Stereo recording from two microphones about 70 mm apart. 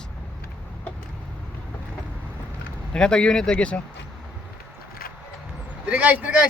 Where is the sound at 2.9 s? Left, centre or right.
Centre.